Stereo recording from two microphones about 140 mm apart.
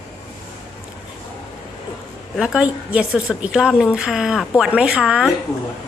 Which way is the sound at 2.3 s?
5° right (ahead or behind).